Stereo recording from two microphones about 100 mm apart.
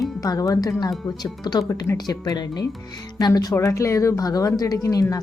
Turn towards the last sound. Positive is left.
turn(degrees=40)  # may be behind; listen again after turning